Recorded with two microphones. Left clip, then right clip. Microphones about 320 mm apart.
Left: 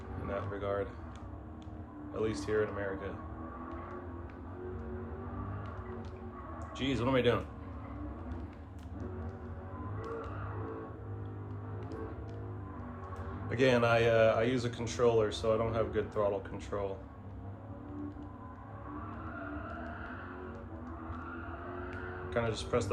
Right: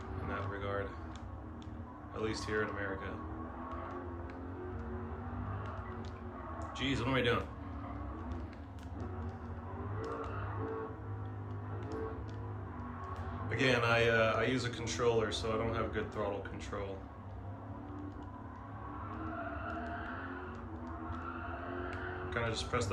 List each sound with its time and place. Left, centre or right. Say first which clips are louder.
0.3 s a sound: left 4 dB; centre
2.1 s a man's voice: left 4 dB; centre
6.6 s speech: left 2 dB; centre
13.5 s a man's voice: left 3 dB; centre
22.3 s a man's voice: left 4 dB; centre